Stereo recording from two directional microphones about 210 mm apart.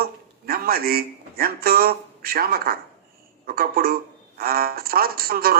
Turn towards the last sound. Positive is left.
turn(degrees=-45)  # may be behind; listen again after turning